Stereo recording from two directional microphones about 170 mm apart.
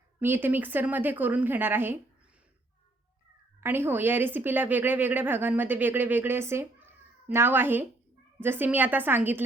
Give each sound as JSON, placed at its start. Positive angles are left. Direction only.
{"t": 0.2, "sound": "speech", "side_deg": -10}
{"t": 3.6, "sound": "speech", "side_deg": -10}